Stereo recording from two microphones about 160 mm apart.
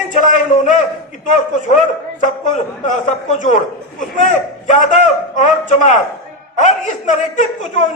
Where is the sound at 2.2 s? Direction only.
50° left (ahead or behind).